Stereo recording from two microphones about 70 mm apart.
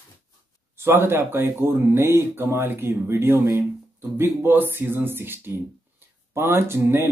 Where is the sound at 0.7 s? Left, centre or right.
Right.